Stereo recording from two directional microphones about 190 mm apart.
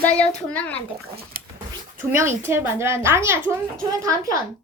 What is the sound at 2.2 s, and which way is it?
A woman's voice, 10° right (ahead or behind).